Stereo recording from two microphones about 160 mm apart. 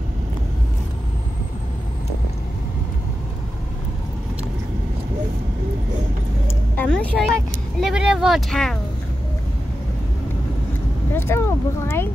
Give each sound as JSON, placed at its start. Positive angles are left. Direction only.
{"t": 6.4, "sound": "vehicle", "side_deg": 10}
{"t": 11.1, "sound": "speech", "side_deg": 15}